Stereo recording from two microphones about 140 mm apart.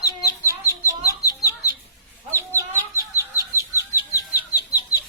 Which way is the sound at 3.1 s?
20° left (ahead or behind).